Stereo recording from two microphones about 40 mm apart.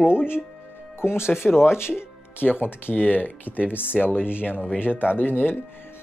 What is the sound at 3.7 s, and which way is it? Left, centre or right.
Speech, left.